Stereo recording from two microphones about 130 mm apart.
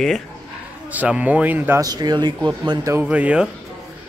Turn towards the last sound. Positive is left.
turn(degrees=-10)  # may be behind; listen again after turning